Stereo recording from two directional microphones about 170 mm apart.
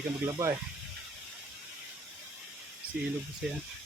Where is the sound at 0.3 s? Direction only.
20° right (ahead or behind).